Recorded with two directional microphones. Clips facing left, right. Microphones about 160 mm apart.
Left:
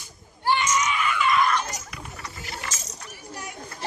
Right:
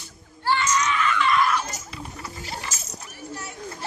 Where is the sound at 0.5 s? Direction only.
15° left (ahead or behind).